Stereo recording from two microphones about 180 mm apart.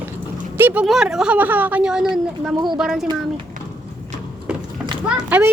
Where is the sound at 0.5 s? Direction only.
10° right (ahead or behind).